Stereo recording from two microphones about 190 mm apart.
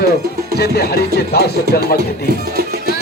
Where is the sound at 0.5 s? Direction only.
55° left (ahead or behind).